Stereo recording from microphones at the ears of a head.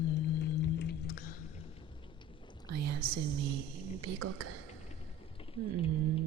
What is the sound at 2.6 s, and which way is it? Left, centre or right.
A woman's voice, right.